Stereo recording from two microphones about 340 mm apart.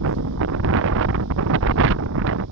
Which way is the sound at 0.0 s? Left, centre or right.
Right.